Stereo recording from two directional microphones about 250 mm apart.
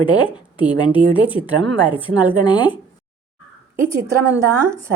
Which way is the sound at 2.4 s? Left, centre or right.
Centre.